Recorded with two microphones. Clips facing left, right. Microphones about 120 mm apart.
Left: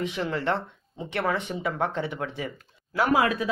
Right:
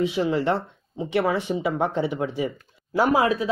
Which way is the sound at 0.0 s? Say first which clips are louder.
Right 6 dB; 10° right (ahead or behind).